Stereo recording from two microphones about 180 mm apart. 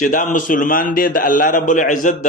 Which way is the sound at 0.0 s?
45° left (ahead or behind).